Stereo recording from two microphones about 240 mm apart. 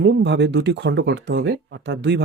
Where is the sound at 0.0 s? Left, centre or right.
Right.